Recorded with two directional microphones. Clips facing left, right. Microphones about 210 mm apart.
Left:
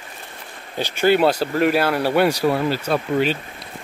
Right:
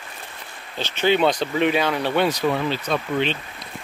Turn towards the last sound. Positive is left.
turn(degrees=5)  # may be behind; listen again after turning